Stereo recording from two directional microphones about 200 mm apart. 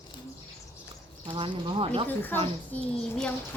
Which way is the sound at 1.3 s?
25° right (ahead or behind).